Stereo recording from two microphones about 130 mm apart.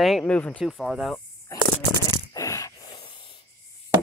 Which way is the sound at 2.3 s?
25° left (ahead or behind).